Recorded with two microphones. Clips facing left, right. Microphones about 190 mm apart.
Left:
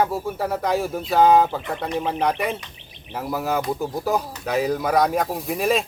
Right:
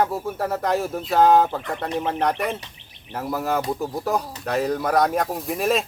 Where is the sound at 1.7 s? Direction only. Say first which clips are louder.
Even; 15° left (ahead or behind).